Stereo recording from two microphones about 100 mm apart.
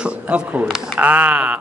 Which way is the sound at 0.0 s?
10° right (ahead or behind).